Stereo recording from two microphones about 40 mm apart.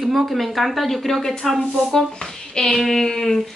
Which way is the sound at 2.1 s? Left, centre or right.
Centre.